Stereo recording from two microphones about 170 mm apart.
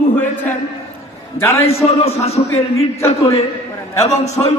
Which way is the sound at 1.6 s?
35° left (ahead or behind).